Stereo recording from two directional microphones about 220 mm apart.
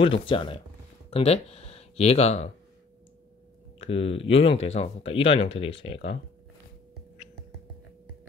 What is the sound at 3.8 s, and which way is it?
Speech, 25° left (ahead or behind).